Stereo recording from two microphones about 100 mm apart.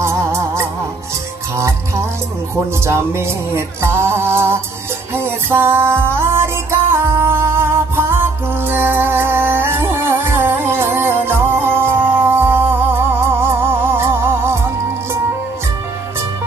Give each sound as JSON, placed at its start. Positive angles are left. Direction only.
{"t": 0.0, "sound": "music", "side_deg": -25}